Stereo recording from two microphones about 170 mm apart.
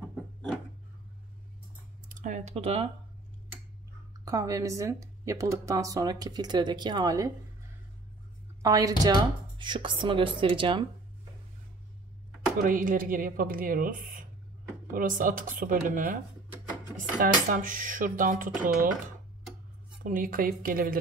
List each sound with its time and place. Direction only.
2.0 s speech: 50° right (ahead or behind)
4.2 s speech: 20° right (ahead or behind)
8.6 s speech: 20° right (ahead or behind)
12.6 s speech: 55° right (ahead or behind)
17.2 s speech: 50° right (ahead or behind)